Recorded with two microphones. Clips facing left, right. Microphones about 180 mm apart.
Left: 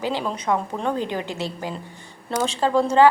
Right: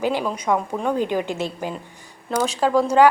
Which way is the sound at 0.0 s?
15° right (ahead or behind).